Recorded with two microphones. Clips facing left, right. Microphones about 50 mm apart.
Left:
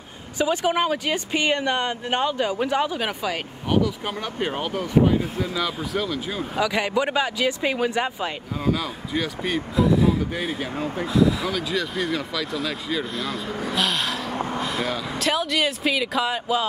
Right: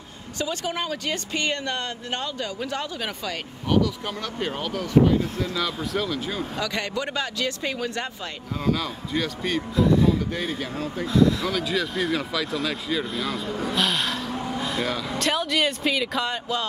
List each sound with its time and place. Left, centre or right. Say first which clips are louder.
0.4 s speech: left 7 dB; centre
11.1 s speech: right 1 dB; centre
14.3 s a sound: left 2 dB; left
14.6 s speech: left 1 dB; centre